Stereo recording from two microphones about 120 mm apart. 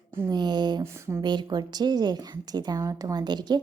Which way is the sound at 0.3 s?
35° right (ahead or behind).